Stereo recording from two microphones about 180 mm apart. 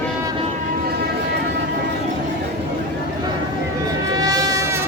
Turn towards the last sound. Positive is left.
turn(degrees=-20)  # may be behind; listen again after turning